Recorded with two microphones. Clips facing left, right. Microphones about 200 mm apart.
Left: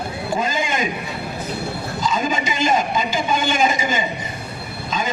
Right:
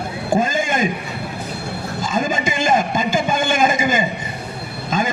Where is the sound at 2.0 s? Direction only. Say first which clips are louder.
Right 1 dB; 50° right (ahead or behind).